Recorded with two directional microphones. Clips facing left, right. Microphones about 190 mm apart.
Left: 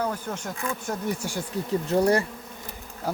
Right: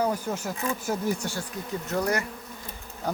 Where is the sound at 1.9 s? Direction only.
30° left (ahead or behind).